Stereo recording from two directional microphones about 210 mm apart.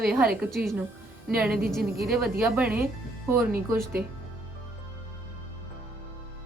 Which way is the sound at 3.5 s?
45° right (ahead or behind).